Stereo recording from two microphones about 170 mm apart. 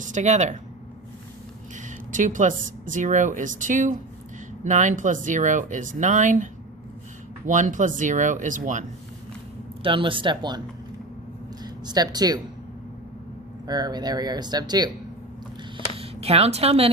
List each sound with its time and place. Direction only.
0.0 s speech: 45° right (ahead or behind)
2.1 s speech: 50° right (ahead or behind)
9.8 s speech: 30° right (ahead or behind)
11.6 s speech: 25° right (ahead or behind)
13.7 s speech: 25° right (ahead or behind)
16.0 s a woman's voice: 35° right (ahead or behind)